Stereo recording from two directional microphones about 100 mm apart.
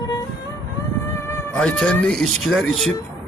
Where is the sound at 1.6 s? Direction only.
10° left (ahead or behind).